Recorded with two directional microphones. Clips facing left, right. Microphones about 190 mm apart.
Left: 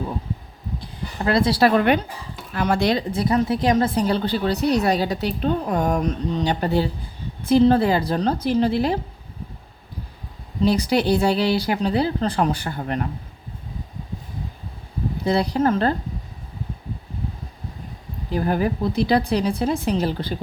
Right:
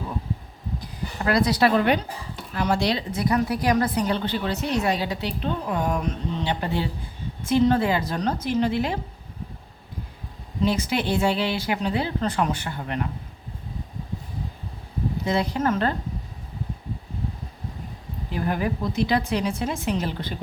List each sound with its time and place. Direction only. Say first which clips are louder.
0.8 s a sound: left 3 dB; 25° left (ahead or behind)
2.6 s speech: left 3 dB; 55° left (ahead or behind)
3.1 s a woman's voice: left 3 dB; 30° left (ahead or behind)
10.6 s a woman's voice: left 5 dB; 35° left (ahead or behind)
15.2 s a woman's voice: left 5 dB; 35° left (ahead or behind)
18.3 s a woman's voice: left 4 dB; 35° left (ahead or behind)